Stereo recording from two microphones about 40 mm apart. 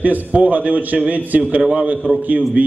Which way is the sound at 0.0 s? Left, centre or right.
Right.